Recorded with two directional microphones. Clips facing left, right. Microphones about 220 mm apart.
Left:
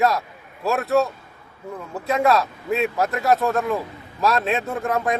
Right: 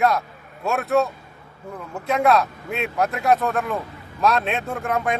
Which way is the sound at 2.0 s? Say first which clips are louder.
Even; centre (ahead or behind).